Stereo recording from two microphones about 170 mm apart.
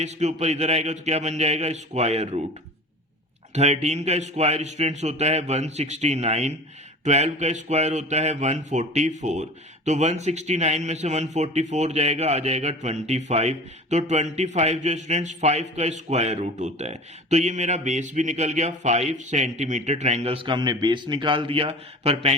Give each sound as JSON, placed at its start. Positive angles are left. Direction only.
{"t": 0.0, "sound": "a man's voice", "side_deg": -40}
{"t": 3.5, "sound": "a man's voice", "side_deg": -40}